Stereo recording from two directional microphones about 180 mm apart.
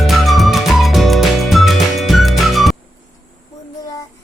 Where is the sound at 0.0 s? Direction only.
Centre (ahead or behind).